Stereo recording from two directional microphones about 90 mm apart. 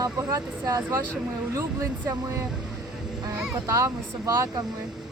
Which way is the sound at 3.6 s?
40° right (ahead or behind).